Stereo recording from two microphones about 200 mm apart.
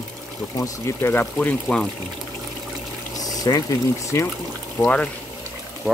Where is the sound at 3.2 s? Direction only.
20° left (ahead or behind).